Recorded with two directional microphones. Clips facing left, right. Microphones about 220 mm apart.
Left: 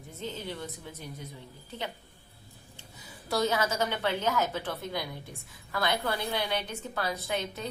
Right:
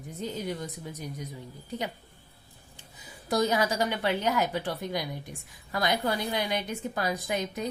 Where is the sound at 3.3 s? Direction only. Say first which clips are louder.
Right 2 dB; 15° right (ahead or behind).